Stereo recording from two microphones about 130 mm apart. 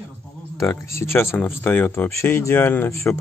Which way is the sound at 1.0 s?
20° left (ahead or behind).